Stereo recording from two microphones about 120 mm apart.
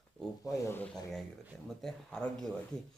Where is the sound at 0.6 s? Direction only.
20° left (ahead or behind).